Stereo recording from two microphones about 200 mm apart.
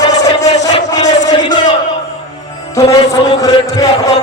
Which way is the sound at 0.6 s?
20° left (ahead or behind).